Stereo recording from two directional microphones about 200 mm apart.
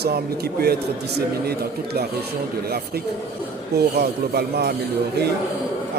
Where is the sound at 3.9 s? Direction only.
55° right (ahead or behind).